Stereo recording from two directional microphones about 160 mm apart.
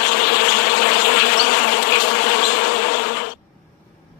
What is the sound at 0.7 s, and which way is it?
Bee, 90° left.